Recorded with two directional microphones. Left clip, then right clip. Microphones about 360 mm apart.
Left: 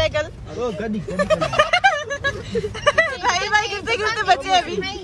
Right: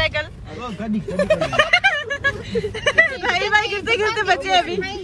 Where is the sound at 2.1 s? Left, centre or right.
Left.